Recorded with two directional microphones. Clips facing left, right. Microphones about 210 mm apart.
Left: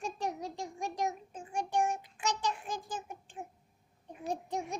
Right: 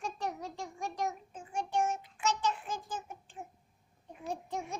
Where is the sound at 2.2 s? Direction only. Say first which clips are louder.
Right 2 dB; 15° left (ahead or behind).